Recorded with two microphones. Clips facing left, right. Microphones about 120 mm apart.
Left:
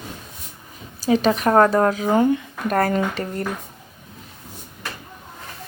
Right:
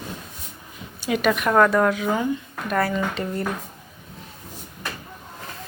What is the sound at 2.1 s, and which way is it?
Speech, 60° left (ahead or behind).